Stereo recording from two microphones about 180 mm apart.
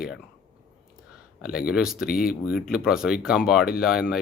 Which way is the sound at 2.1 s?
55° left (ahead or behind).